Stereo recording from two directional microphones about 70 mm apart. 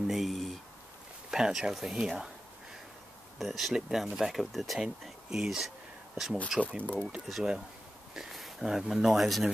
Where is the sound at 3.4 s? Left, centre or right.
Centre.